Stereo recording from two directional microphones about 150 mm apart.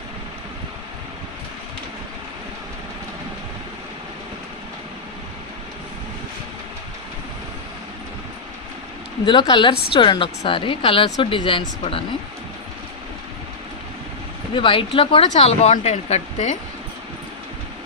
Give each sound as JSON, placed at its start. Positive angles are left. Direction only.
{"t": 9.2, "sound": "a woman's voice", "side_deg": 30}
{"t": 14.5, "sound": "a woman's voice", "side_deg": 35}